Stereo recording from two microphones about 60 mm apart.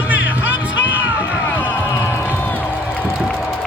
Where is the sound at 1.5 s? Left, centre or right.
Left.